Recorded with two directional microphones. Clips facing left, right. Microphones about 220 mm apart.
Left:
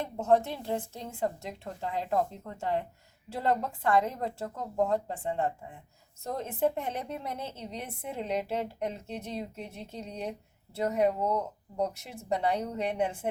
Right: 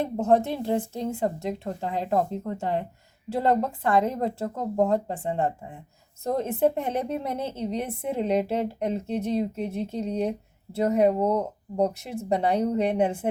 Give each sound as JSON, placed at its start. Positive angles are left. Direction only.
{"t": 0.0, "sound": "a woman's voice", "side_deg": -30}
{"t": 12.3, "sound": "a woman's voice", "side_deg": -30}